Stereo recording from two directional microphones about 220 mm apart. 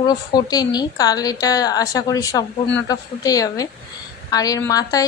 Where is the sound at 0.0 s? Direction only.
20° left (ahead or behind).